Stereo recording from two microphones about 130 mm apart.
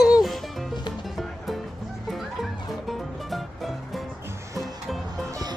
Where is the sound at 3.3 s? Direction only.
Centre (ahead or behind).